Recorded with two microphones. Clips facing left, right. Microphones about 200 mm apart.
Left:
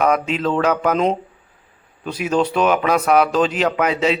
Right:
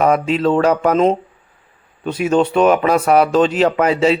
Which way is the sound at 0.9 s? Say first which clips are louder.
Right 4 dB; centre (ahead or behind).